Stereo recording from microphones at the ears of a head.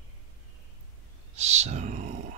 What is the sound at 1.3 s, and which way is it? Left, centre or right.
Speech, right.